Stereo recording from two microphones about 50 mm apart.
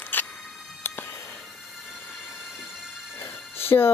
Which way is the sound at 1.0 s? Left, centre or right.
Left.